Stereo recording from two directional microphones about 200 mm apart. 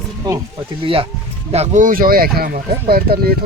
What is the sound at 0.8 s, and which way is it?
Speech, 25° right (ahead or behind).